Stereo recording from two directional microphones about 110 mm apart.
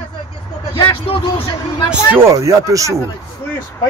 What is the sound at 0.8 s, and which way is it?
Speech, 55° left (ahead or behind).